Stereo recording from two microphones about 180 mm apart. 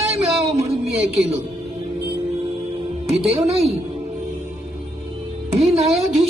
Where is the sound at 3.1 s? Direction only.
35° right (ahead or behind).